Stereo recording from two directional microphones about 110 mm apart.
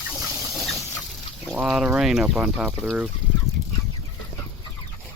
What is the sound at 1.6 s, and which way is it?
Speech, 5° right (ahead or behind).